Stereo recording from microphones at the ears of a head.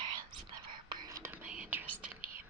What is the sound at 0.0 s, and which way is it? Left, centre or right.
Whispering, right.